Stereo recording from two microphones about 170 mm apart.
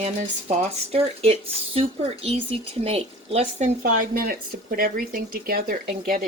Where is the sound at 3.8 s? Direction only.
60° right (ahead or behind).